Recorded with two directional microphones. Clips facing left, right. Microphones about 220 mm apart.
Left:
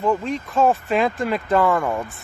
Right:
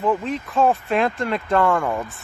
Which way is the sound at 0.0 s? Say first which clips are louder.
Even; centre (ahead or behind).